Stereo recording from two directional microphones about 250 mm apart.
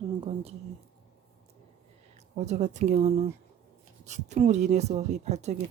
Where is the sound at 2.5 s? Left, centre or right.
Right.